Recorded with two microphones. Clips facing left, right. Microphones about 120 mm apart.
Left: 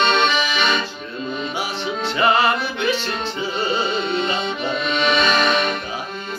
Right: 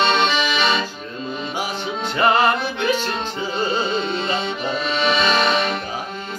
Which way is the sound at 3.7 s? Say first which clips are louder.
Even; 30° right (ahead or behind).